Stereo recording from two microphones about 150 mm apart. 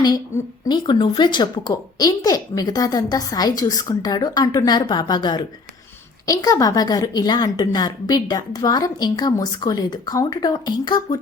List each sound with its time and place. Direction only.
0.7 s a woman's voice: 30° left (ahead or behind)